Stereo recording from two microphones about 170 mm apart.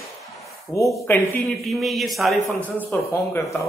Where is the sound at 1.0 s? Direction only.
15° left (ahead or behind).